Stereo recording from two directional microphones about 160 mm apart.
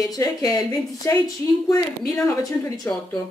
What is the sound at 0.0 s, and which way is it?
Speech, 20° left (ahead or behind).